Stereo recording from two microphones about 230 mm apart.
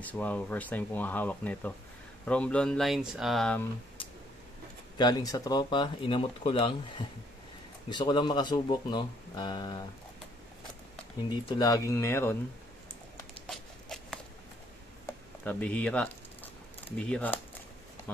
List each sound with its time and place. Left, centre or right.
0.0 s speech: centre
4.9 s speech: centre
11.2 s speech: centre
13.5 s a sound: centre
15.4 s speech: centre